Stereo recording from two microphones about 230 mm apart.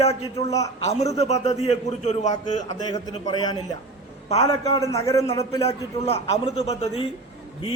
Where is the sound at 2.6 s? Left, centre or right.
Centre.